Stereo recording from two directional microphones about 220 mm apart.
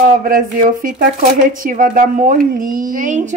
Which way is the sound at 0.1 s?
40° right (ahead or behind).